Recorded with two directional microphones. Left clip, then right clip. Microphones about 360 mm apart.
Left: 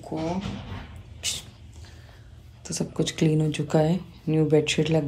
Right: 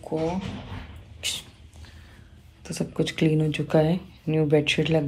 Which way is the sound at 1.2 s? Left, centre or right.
Centre.